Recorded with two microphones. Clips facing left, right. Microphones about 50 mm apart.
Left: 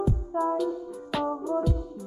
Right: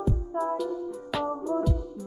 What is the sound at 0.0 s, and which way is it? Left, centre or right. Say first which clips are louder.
Music: left 2 dB; centre.